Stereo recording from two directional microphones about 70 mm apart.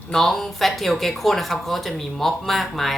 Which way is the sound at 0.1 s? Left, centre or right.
Centre.